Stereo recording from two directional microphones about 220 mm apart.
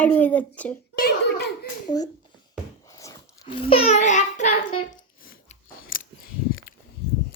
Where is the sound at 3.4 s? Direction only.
25° left (ahead or behind).